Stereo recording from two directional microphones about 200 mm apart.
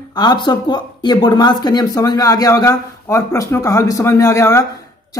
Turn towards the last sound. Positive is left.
turn(degrees=15)  # may be behind; listen again after turning